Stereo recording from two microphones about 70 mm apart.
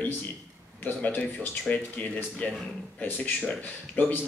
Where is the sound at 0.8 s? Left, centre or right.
Left.